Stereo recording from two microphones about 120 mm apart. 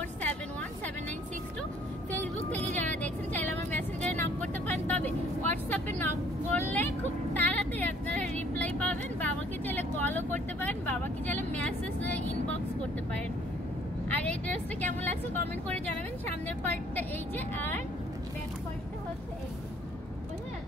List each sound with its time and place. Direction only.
2.5 s vehicle: 15° left (ahead or behind)
14.0 s vehicle: 15° left (ahead or behind)
16.4 s vehicle: 15° left (ahead or behind)